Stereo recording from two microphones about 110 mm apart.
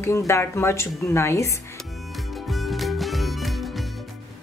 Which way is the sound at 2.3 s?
Centre (ahead or behind).